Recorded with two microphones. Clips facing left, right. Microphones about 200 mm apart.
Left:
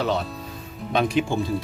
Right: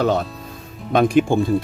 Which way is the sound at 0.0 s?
50° right (ahead or behind).